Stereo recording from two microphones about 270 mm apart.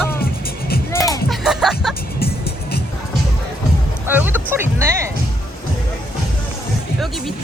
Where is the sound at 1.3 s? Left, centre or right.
Centre.